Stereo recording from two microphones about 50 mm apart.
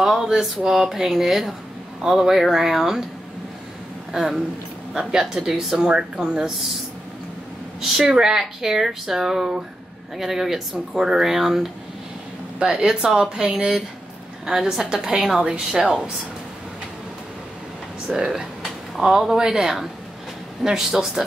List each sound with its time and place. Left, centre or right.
0.0 s speech: centre
4.1 s speech: centre
7.8 s speech: centre
18.0 s speech: centre